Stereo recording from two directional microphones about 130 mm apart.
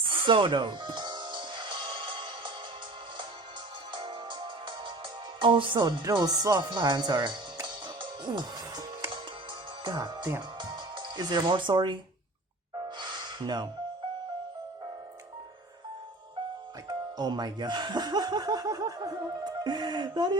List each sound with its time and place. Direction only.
0.0 s music: 40° right (ahead or behind)
3.9 s music: 40° right (ahead or behind)
5.4 s speech: 40° right (ahead or behind)
8.2 s music: 35° right (ahead or behind)
9.8 s speech: 35° right (ahead or behind)
10.6 s music: 40° right (ahead or behind)
13.0 s gasp: 35° right (ahead or behind)
17.2 s speech: 35° right (ahead or behind)